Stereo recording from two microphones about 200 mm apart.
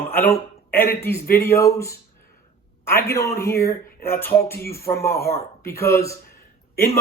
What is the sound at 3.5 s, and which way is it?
Speech, 50° left (ahead or behind).